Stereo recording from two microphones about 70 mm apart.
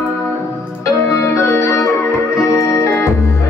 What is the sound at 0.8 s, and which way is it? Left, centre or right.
Music, left.